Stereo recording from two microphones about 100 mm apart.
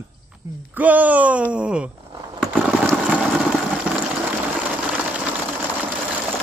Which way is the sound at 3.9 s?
10° right (ahead or behind).